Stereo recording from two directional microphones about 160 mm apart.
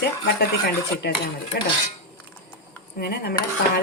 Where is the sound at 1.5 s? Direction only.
80° left.